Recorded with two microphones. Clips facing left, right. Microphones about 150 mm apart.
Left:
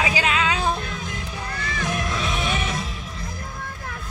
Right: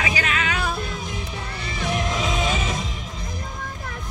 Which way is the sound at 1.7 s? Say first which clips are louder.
Right 2 dB; 20° right (ahead or behind).